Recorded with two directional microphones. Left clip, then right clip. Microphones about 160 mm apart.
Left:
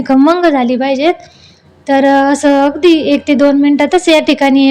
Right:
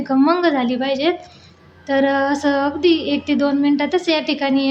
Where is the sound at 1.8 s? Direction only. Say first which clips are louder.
Left 8 dB; 45° left (ahead or behind).